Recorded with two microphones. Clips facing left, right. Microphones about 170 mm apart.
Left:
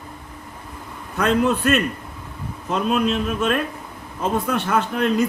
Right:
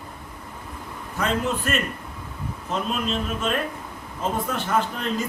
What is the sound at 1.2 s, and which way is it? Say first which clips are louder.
Speech: left 6 dB; 65° left (ahead or behind).